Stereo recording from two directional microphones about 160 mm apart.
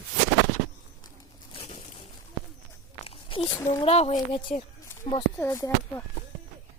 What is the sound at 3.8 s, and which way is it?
Speech, 40° left (ahead or behind).